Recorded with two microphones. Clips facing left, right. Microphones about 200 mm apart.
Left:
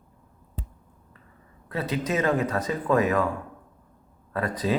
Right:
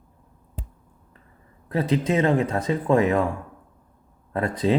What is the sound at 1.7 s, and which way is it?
Speech, 30° right (ahead or behind).